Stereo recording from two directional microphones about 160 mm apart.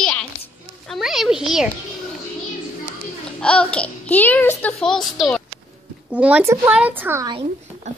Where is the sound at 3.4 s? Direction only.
5° left (ahead or behind).